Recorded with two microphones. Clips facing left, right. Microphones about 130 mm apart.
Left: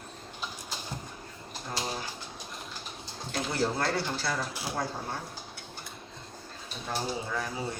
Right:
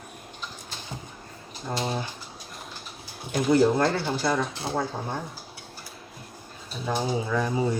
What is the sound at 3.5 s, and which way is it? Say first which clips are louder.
Speech: right 9 dB; 20° right (ahead or behind).